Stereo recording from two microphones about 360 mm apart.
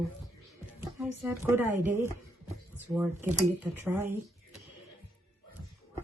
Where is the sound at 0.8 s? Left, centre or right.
Centre.